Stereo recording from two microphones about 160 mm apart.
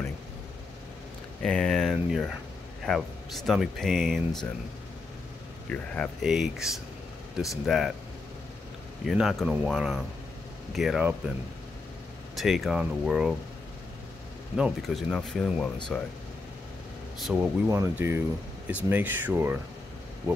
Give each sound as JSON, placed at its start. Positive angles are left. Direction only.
{"t": 1.4, "sound": "speech", "side_deg": 5}
{"t": 5.7, "sound": "speech", "side_deg": 5}
{"t": 6.2, "sound": "speech", "side_deg": -5}
{"t": 9.0, "sound": "speech", "side_deg": 0}
{"t": 12.4, "sound": "speech", "side_deg": 0}
{"t": 14.6, "sound": "speech", "side_deg": -5}
{"t": 17.2, "sound": "speech", "side_deg": -10}